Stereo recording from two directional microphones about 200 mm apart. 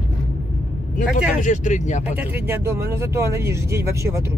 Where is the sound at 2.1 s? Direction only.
10° right (ahead or behind).